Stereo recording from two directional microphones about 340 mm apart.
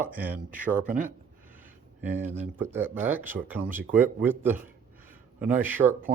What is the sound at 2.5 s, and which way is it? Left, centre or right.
Speech, centre.